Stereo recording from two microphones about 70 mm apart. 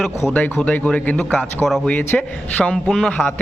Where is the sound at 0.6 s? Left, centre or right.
Centre.